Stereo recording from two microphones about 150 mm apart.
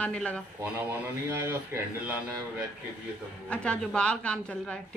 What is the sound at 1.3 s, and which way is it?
Speech, 15° right (ahead or behind).